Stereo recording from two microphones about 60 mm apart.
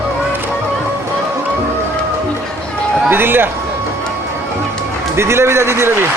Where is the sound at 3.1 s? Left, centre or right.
Right.